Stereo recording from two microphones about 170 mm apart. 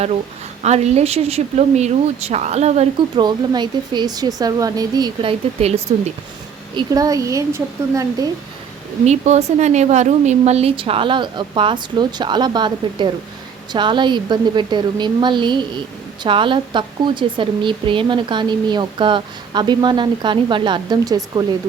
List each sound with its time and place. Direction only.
0.6 s a woman's voice: 40° right (ahead or behind)
3.2 s speech: 25° right (ahead or behind)
5.5 s a woman's voice: 40° right (ahead or behind)
6.7 s speech: 20° right (ahead or behind)
9.0 s a woman's voice: 40° right (ahead or behind); by 21.4 s 20° right (ahead or behind)